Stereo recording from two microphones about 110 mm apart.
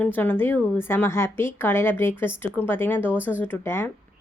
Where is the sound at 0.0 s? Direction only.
15° left (ahead or behind).